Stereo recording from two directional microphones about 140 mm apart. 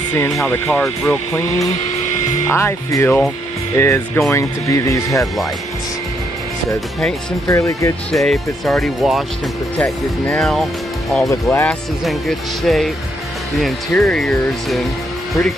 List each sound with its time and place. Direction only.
0.7 s speech: 5° left (ahead or behind)
2.5 s speech: 20° left (ahead or behind)
7.4 s speech: 20° left (ahead or behind)
8.1 s speech: centre (ahead or behind)
10.3 s speech: centre (ahead or behind)
11.2 s speech: 20° left (ahead or behind)
12.0 s speech: centre (ahead or behind)